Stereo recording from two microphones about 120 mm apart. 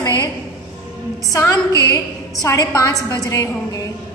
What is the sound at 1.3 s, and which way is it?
A woman's voice, 25° left (ahead or behind).